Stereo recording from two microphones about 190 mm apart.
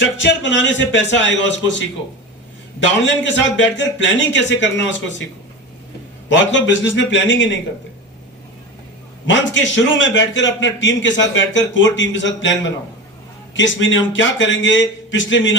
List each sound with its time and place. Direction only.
0.0 s a man's voice: 75° left (ahead or behind)
3.2 s a man's voice: 75° left (ahead or behind)
6.2 s a man's voice: 70° left (ahead or behind)
9.2 s a man's voice: 75° left (ahead or behind)